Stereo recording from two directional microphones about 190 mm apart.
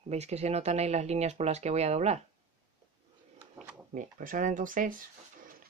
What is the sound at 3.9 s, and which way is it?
Speech, 45° right (ahead or behind).